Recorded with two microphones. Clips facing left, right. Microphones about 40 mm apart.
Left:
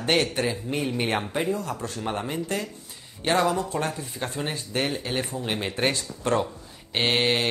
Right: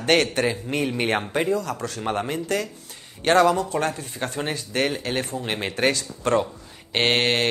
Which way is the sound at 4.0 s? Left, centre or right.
Right.